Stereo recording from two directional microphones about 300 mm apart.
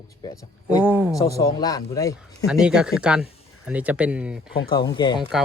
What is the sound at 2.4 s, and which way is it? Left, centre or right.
Speech, centre.